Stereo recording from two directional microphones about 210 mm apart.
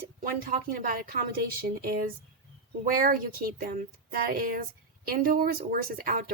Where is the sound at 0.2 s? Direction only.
40° right (ahead or behind).